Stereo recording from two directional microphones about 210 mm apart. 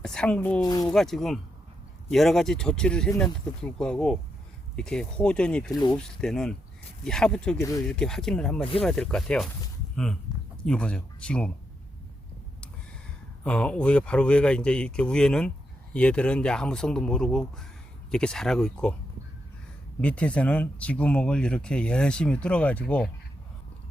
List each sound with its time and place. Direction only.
0.0 s speech: 5° left (ahead or behind)
5.7 s speech: 20° left (ahead or behind)
6.0 s speech: 5° left (ahead or behind)
13.4 s speech: 5° left (ahead or behind)
20.0 s speech: 5° left (ahead or behind)